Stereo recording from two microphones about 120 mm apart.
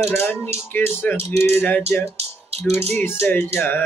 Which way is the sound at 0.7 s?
15° left (ahead or behind).